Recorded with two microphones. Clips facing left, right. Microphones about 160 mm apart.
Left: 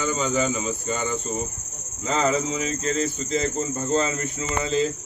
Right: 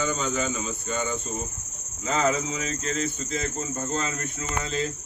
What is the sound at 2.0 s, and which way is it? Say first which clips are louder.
Speech: left 2 dB; 5° right (ahead or behind).